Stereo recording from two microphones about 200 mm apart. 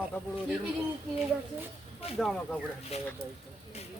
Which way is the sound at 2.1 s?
Centre (ahead or behind).